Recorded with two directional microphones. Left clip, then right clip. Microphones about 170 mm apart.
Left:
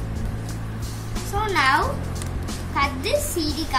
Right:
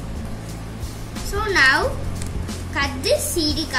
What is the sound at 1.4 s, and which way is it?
A woman's voice, 15° left (ahead or behind).